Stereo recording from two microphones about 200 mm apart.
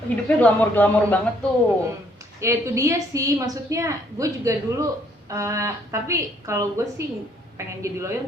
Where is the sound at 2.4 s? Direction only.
15° right (ahead or behind).